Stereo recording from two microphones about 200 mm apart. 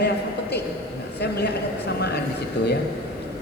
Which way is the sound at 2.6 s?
60° left (ahead or behind).